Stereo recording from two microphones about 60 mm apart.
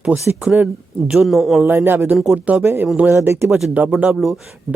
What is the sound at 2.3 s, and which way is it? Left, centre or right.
Speech, right.